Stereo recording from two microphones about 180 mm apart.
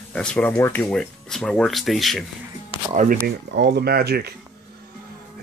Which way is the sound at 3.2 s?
70° right (ahead or behind).